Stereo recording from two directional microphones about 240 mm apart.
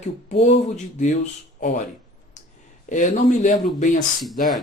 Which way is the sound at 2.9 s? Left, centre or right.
Left.